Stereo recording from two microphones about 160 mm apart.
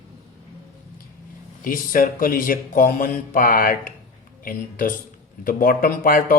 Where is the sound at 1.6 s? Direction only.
60° left (ahead or behind).